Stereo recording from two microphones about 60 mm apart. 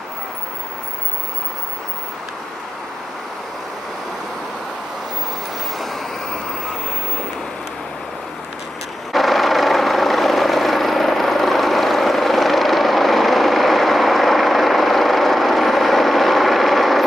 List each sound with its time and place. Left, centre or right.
9.1 s vehicle: centre